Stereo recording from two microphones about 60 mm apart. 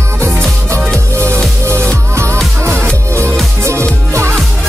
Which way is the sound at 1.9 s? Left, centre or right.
Right.